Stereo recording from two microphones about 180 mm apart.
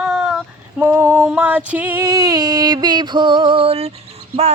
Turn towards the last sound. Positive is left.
turn(degrees=-35)  # may be behind; listen again after turning